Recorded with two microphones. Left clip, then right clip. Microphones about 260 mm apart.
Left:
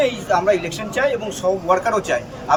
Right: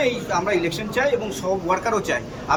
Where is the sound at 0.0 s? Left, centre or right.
Centre.